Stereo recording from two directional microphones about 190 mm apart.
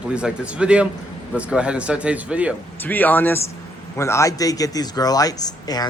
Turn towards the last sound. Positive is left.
turn(degrees=20)  # may be behind; listen again after turning